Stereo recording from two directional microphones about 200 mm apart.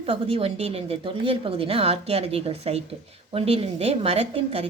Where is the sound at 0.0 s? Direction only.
30° right (ahead or behind).